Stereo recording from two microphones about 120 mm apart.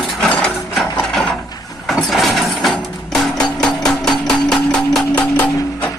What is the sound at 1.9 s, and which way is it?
Music, centre (ahead or behind).